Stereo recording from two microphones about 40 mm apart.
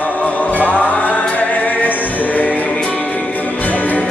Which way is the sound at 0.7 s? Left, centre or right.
Left.